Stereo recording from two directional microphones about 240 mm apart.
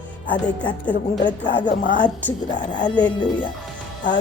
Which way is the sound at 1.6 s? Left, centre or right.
Left.